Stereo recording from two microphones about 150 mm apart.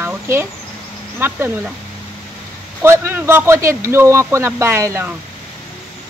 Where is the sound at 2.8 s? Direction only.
15° right (ahead or behind).